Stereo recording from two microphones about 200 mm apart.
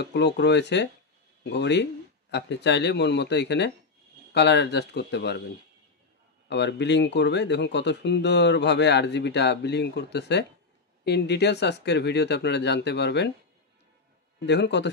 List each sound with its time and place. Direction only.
0.0 s speech: 60° left (ahead or behind)
6.5 s speech: 60° left (ahead or behind)
14.4 s speech: 60° left (ahead or behind)